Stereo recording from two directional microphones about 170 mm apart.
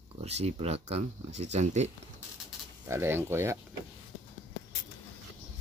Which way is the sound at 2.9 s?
15° right (ahead or behind).